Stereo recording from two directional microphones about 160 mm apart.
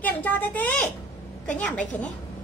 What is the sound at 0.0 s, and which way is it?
A woman's voice, 10° left (ahead or behind).